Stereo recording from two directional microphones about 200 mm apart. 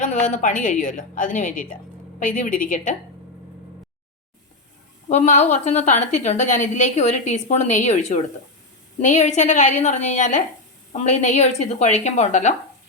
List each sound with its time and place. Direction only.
0.3 s a woman's voice: 40° left (ahead or behind)
5.0 s a woman's voice: 35° left (ahead or behind)